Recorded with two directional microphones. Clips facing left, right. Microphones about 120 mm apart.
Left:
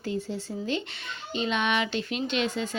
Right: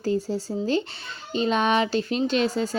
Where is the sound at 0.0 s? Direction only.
35° right (ahead or behind).